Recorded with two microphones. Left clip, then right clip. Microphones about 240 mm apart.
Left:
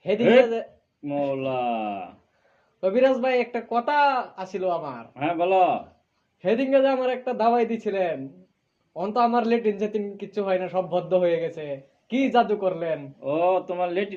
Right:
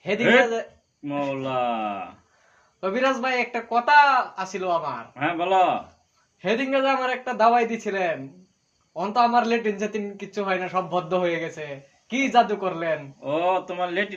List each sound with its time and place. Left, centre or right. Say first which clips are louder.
0.0 s speech: left 1 dB; right
1.3 s speech: right 3 dB; centre
2.8 s a man's voice: left 3 dB; right
5.1 s speech: even; centre
6.4 s a man's voice: left 2 dB; right
13.2 s speech: left 1 dB; centre